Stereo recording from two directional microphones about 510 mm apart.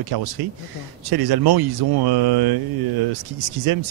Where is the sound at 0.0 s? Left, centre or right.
Right.